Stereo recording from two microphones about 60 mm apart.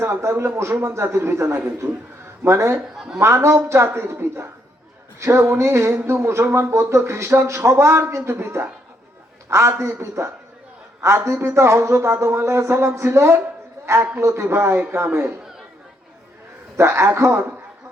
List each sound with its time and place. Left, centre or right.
0.0 s a man's voice: right
1.6 s a man's voice: right
2.4 s a man's voice: right
16.7 s speech: right